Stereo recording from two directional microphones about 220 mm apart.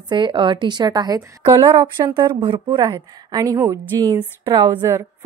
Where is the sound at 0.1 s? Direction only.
20° right (ahead or behind).